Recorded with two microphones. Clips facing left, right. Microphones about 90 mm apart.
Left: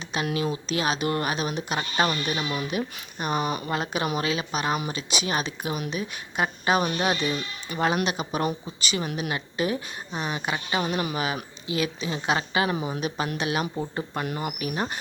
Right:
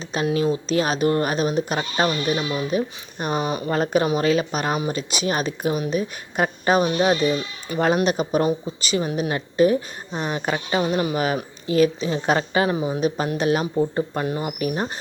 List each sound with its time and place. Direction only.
0.4 s speech: 35° right (ahead or behind)
6.8 s speech: 25° right (ahead or behind)
13.0 s speech: 35° right (ahead or behind)